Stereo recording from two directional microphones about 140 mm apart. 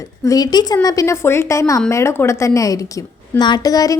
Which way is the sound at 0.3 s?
25° left (ahead or behind).